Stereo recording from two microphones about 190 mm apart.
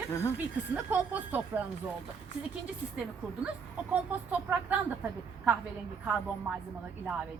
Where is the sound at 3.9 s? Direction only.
10° right (ahead or behind).